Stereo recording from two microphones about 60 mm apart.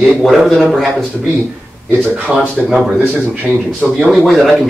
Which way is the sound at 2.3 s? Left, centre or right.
Centre.